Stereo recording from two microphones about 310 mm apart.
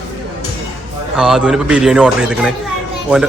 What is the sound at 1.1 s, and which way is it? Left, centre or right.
A man's voice, centre.